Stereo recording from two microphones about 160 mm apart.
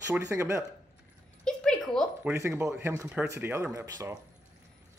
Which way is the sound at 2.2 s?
15° right (ahead or behind).